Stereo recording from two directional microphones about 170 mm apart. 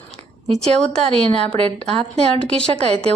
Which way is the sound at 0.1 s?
40° right (ahead or behind).